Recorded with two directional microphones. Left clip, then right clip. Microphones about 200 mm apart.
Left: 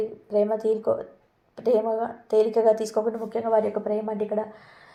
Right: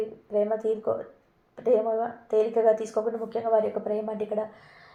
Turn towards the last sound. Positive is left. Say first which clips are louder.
# left 2 dB
turn(degrees=30)  # may be behind; listen again after turning